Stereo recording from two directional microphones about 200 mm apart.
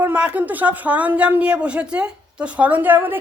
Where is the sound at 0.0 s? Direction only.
5° right (ahead or behind).